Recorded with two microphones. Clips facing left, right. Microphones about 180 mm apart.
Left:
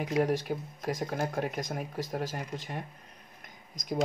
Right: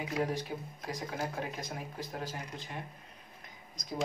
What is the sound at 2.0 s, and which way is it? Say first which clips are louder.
Speech: left 7 dB; 90° left.